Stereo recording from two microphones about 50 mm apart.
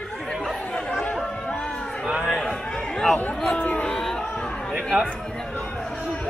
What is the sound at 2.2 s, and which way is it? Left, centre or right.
Speech, centre.